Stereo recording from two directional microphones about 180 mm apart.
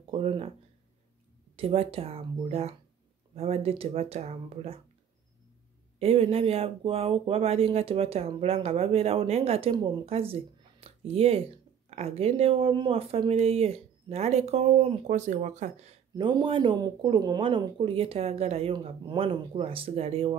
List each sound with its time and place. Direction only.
0.1 s speech: 30° right (ahead or behind)
1.6 s speech: 30° right (ahead or behind)
5.9 s speech: 35° right (ahead or behind)
16.2 s speech: 25° right (ahead or behind)